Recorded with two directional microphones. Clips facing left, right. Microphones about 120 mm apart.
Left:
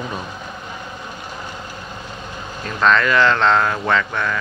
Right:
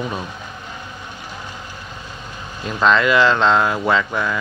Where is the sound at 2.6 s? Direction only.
10° right (ahead or behind).